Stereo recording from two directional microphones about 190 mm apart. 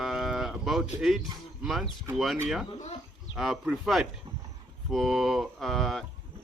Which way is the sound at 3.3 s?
Centre (ahead or behind).